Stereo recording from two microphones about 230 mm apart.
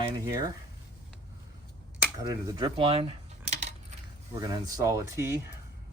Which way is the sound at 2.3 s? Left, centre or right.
Centre.